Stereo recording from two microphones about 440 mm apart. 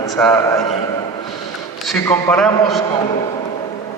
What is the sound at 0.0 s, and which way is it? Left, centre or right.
Speech, centre.